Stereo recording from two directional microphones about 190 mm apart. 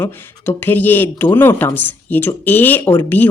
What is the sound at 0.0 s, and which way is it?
Speech, 10° left (ahead or behind).